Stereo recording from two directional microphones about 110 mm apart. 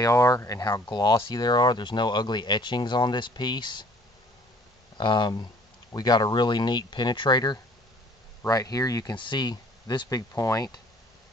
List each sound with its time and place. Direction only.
0.0 s speech: 30° left (ahead or behind)
4.9 s speech: 45° left (ahead or behind)
9.1 s speech: 45° left (ahead or behind)